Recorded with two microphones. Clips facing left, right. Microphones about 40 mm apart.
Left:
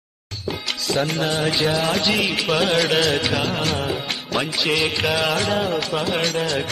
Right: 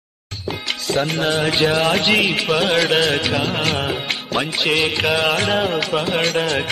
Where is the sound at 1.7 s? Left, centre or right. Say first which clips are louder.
Right 4 dB; right.